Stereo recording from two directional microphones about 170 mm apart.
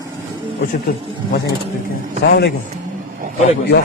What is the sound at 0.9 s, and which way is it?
Speech, 60° left (ahead or behind).